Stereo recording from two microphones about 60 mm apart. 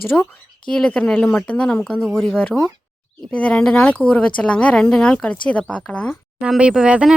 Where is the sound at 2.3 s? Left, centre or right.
Left.